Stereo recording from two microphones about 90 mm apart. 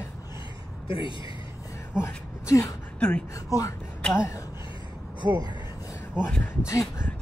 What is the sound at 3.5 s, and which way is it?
Speech, 40° left (ahead or behind).